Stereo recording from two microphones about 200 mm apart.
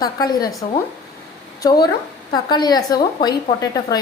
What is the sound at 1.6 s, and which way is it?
A woman's voice, 20° left (ahead or behind).